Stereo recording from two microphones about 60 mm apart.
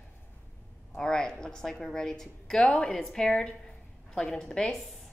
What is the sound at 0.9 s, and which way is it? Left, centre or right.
A woman's voice, centre.